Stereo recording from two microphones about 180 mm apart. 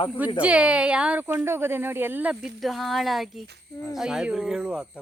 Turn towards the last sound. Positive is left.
turn(degrees=-5)  # may be behind; listen again after turning